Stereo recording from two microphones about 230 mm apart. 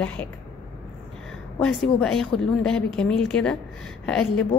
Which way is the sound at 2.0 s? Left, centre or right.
Centre.